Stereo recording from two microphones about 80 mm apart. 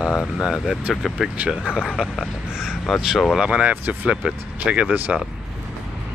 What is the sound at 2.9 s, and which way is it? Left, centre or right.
Speech, centre.